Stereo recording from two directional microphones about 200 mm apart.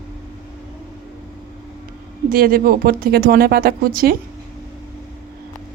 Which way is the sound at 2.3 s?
45° right (ahead or behind).